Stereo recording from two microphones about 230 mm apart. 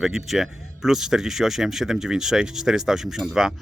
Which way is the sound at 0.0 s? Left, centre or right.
Centre.